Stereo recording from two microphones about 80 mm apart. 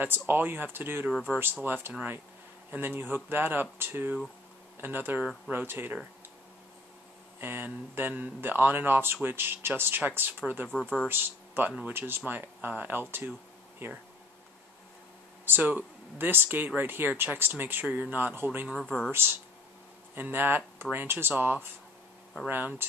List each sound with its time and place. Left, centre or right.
0.0 s speech: right
7.3 s speech: right
15.4 s speech: right
18.8 s speech: centre
20.2 s speech: right